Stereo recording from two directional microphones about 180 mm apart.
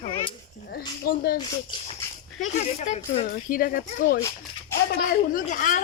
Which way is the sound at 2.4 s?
40° left (ahead or behind).